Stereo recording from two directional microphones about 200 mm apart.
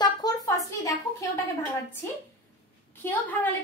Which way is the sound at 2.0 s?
10° left (ahead or behind).